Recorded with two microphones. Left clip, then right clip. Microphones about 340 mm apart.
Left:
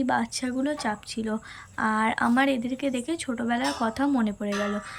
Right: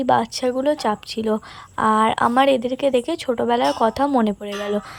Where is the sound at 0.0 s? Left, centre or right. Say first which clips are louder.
Right 8 dB; centre.